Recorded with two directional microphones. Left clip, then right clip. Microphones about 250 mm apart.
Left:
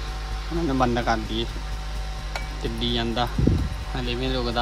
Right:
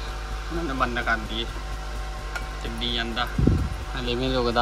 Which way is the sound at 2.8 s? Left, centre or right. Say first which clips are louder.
Left 1 dB; centre.